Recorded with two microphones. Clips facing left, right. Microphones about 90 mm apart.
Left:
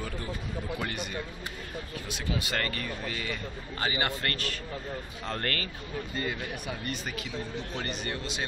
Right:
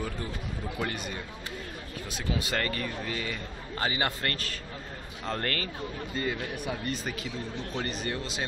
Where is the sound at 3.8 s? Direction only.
30° right (ahead or behind).